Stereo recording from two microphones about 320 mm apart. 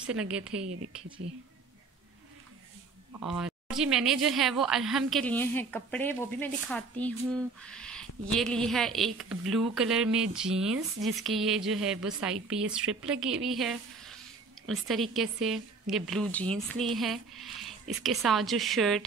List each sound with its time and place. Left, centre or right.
0.0 s a woman's voice: centre
3.3 s a woman's voice: centre